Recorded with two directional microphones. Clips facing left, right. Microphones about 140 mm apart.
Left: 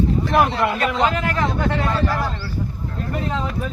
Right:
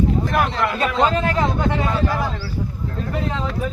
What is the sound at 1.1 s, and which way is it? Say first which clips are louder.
Speech: right 2 dB; 20° right (ahead or behind).